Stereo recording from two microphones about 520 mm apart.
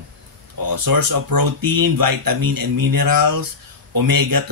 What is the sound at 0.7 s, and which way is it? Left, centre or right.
Speech, right.